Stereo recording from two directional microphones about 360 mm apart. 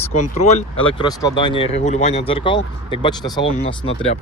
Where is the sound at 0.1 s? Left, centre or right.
Centre.